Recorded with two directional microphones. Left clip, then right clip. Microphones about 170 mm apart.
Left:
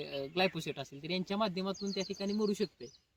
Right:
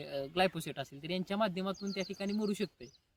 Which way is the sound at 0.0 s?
Centre (ahead or behind).